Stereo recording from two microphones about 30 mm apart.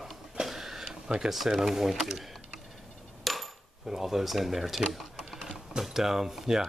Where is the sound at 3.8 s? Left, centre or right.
Centre.